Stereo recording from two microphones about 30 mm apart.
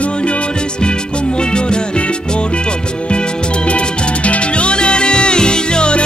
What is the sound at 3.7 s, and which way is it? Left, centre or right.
Music, left.